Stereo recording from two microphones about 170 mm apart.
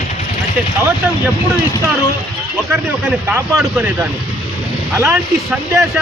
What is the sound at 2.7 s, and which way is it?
A man's voice, 10° right (ahead or behind).